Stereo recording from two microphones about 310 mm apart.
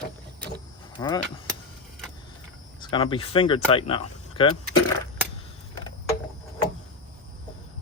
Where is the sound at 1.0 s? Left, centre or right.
Centre.